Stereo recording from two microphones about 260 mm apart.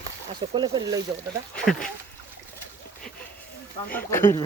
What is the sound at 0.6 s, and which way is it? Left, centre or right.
Speech, centre.